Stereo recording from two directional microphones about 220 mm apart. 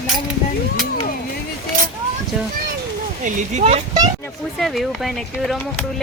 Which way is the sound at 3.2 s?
30° right (ahead or behind).